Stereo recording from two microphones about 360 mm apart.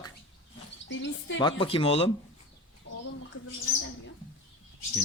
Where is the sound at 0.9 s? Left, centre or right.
Left.